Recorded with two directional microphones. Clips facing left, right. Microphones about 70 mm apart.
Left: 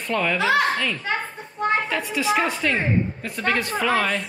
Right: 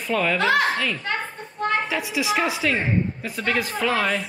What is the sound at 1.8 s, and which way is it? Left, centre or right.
A woman's voice, centre.